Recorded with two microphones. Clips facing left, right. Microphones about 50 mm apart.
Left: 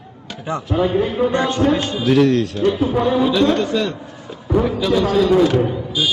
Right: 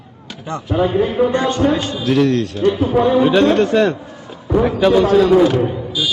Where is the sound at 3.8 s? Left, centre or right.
Centre.